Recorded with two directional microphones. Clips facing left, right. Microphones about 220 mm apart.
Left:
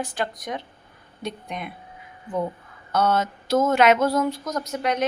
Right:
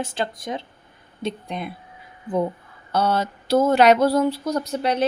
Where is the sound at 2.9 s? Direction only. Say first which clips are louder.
Even; 30° right (ahead or behind).